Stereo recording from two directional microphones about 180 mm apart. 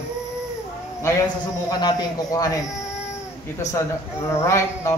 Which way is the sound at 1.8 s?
25° left (ahead or behind).